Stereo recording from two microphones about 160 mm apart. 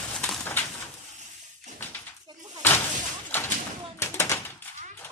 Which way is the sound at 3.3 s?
15° left (ahead or behind).